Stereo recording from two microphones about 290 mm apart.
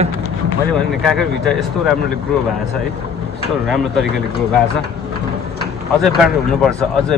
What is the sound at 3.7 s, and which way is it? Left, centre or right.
Speech, centre.